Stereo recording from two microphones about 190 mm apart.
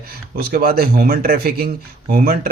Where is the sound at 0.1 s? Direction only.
55° right (ahead or behind).